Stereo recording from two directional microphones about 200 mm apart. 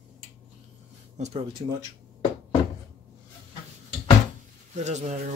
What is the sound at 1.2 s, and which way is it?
Speech, 30° right (ahead or behind).